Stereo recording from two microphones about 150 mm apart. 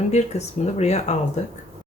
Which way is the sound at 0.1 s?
45° left (ahead or behind).